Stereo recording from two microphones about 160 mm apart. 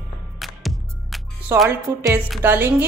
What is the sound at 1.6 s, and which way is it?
A woman's voice, 15° right (ahead or behind).